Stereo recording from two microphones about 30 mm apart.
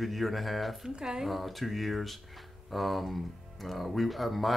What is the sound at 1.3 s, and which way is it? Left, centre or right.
Speech, centre.